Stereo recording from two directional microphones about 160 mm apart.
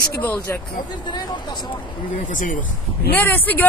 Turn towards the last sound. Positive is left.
turn(degrees=10)  # may be behind; listen again after turning